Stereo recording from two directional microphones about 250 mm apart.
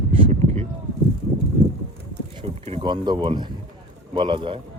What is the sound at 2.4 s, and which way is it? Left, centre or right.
Speech, right.